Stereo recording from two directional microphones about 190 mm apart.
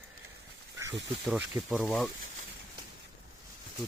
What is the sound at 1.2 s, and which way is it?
Speech, centre (ahead or behind).